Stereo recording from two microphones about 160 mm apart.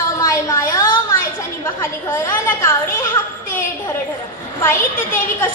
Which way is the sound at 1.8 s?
15° left (ahead or behind).